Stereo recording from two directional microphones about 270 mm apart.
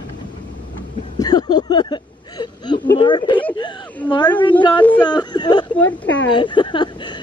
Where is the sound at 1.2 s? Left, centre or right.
Centre.